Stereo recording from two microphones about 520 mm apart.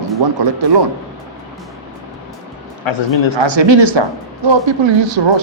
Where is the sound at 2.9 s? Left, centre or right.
Left.